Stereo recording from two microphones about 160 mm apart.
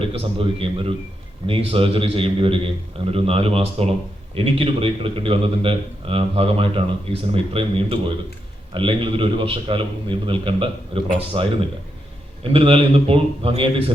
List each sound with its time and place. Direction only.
0.0 s a man's voice: 35° right (ahead or behind)